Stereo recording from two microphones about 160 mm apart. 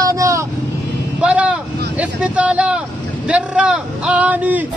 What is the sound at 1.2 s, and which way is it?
Music, 5° right (ahead or behind).